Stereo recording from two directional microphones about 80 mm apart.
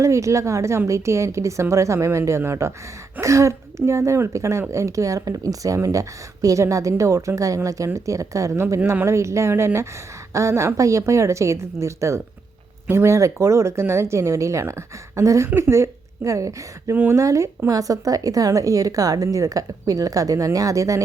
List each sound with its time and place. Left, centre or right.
0.0 s a woman's voice: right
16.9 s speech: right
17.2 s a woman's voice: right